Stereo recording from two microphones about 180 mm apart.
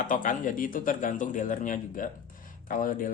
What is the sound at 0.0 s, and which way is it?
Speech, 45° left (ahead or behind).